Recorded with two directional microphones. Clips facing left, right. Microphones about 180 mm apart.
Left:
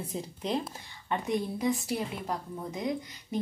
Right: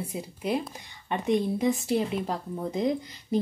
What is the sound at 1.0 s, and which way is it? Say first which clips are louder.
A woman's voice: right 5 dB; 20° right (ahead or behind).